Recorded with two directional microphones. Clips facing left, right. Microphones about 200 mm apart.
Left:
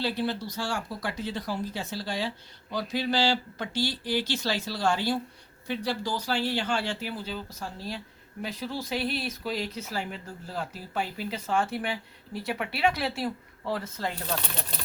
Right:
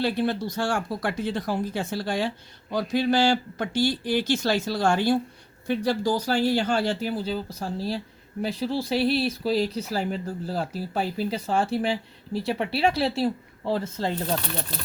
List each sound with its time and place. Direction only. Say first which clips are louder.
0.0 s speech: right 5 dB; 50° right (ahead or behind); by 14.3 s 30° right (ahead or behind)